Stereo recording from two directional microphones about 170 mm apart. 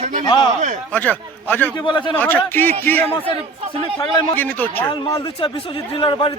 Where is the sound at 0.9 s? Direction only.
10° left (ahead or behind).